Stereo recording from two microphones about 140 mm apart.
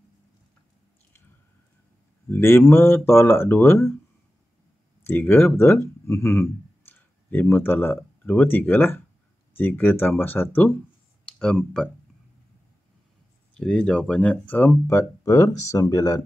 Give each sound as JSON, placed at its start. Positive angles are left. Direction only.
{"t": 2.2, "sound": "speech", "side_deg": 15}
{"t": 5.0, "sound": "speech", "side_deg": 15}
{"t": 13.6, "sound": "speech", "side_deg": 5}
{"t": 14.9, "sound": "speech", "side_deg": 20}